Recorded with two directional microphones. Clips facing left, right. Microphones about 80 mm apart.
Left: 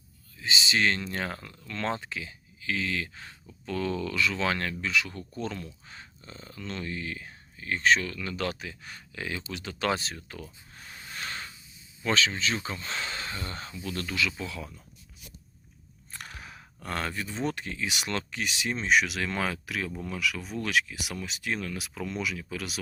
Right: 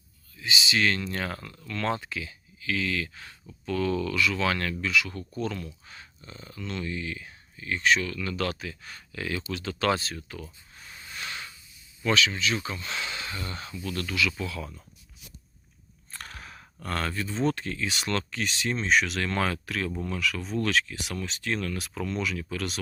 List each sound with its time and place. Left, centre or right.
0.3 s speech: left
10.8 s a sound: left
12.0 s speech: left
16.1 s speech: centre